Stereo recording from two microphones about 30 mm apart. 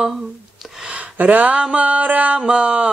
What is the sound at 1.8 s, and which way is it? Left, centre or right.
Mantra, right.